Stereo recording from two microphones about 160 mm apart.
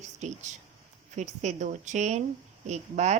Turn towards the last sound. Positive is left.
turn(degrees=-45)  # may be behind; listen again after turning